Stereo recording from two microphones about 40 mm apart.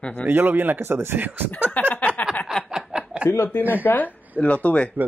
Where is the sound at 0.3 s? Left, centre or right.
Right.